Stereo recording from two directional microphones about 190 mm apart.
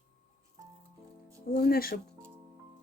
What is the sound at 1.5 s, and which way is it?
Music, 50° left (ahead or behind).